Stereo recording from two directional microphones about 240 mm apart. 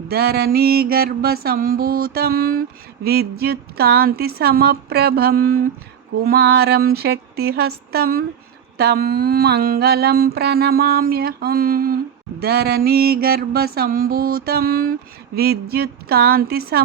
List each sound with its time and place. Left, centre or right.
0.1 s mantra: right